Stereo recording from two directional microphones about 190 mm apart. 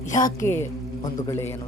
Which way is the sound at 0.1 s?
45° left (ahead or behind).